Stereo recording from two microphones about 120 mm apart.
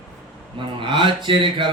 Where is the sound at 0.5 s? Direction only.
45° right (ahead or behind).